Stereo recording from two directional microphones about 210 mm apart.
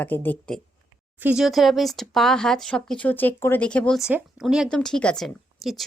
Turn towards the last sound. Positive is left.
turn(degrees=0)  # may be behind; listen again after turning